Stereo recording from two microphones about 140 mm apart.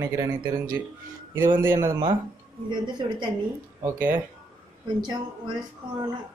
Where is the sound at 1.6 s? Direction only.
15° right (ahead or behind).